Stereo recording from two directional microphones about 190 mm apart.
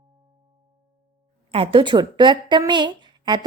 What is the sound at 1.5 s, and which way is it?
Speech, 30° right (ahead or behind).